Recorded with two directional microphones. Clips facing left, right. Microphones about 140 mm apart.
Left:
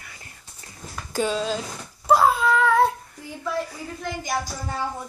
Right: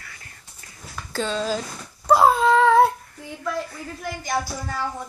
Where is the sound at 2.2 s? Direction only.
30° right (ahead or behind).